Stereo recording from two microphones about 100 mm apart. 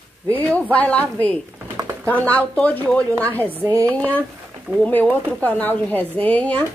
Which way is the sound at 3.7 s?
30° right (ahead or behind).